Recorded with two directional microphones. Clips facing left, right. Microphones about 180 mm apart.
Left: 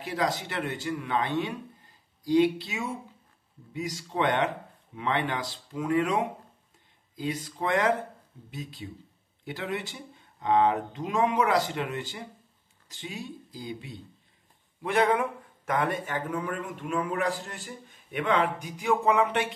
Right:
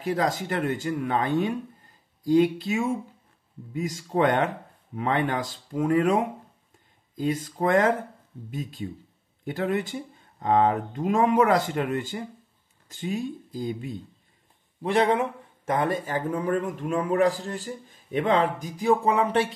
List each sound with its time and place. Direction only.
0.0 s speech: 50° right (ahead or behind)
14.8 s speech: 30° right (ahead or behind)